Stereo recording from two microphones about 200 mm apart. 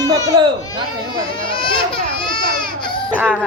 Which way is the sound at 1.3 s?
25° left (ahead or behind).